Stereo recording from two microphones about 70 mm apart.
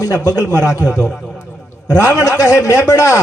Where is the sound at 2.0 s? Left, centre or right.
Left.